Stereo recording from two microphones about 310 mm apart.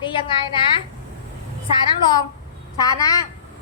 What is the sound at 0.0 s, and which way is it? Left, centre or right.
Speech, centre.